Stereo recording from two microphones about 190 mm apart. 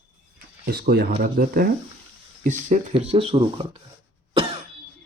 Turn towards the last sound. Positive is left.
turn(degrees=-30)  # may be behind; listen again after turning